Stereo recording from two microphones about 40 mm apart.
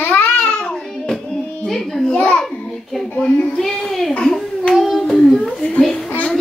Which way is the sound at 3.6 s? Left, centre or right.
Centre.